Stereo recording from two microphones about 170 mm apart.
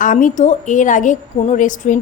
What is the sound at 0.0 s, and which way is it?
A woman's voice, 50° left (ahead or behind).